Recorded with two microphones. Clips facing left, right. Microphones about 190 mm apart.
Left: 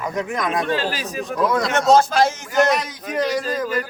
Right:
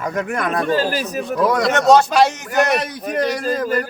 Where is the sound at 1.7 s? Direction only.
70° right (ahead or behind).